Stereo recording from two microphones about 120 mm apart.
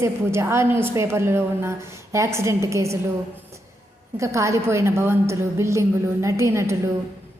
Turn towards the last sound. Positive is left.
turn(degrees=-25)  # may be behind; listen again after turning